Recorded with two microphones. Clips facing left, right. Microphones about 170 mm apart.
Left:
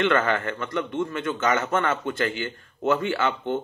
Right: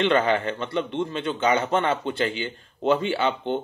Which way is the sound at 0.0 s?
15° right (ahead or behind).